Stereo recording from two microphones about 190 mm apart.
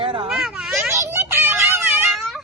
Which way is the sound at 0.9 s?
15° right (ahead or behind).